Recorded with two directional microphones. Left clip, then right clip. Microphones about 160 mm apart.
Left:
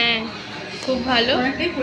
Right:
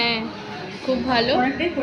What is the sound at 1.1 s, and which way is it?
Music, 10° right (ahead or behind).